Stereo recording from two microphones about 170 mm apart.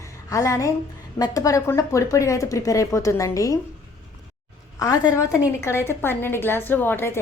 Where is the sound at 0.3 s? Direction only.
20° left (ahead or behind).